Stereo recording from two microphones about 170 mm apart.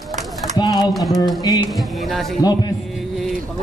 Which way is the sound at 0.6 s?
25° left (ahead or behind).